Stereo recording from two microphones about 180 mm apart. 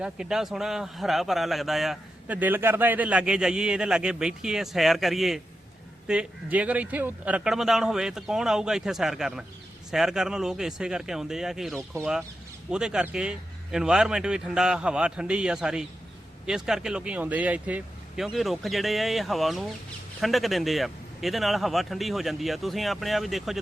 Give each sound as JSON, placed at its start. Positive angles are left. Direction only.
{"t": 0.0, "sound": "speech", "side_deg": -5}